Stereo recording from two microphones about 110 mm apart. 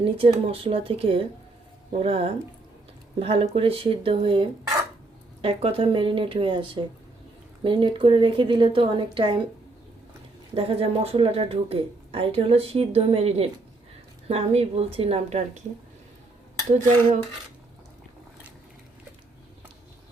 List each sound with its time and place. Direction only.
0.0 s a woman's voice: 60° right (ahead or behind)
10.5 s speech: 60° right (ahead or behind)